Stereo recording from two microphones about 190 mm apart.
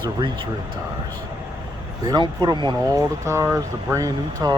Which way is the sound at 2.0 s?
20° right (ahead or behind).